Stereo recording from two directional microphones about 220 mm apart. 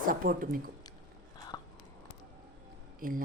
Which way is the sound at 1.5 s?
15° left (ahead or behind).